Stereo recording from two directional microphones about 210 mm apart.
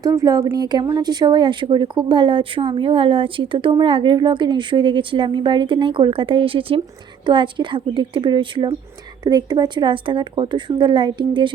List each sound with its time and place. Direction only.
0.0 s a woman's voice: 15° right (ahead or behind)